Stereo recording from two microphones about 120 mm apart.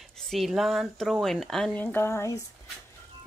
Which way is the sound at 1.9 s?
20° left (ahead or behind).